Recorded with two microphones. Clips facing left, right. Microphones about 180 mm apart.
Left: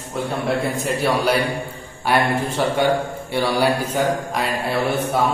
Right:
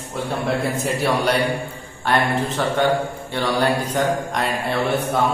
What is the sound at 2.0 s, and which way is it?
Mantra, 10° left (ahead or behind).